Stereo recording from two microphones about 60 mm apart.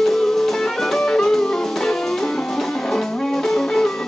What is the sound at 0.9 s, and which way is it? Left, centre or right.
Music, centre.